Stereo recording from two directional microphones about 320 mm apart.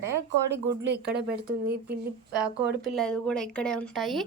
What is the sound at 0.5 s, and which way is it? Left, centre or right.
Speech, right.